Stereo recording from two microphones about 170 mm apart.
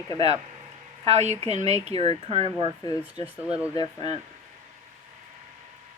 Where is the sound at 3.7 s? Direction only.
25° left (ahead or behind).